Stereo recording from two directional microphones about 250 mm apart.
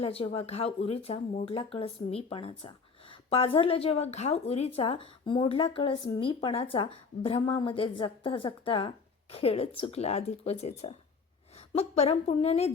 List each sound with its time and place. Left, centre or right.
0.0 s speech: left